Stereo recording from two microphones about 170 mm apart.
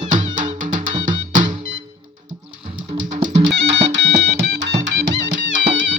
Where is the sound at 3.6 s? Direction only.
90° right.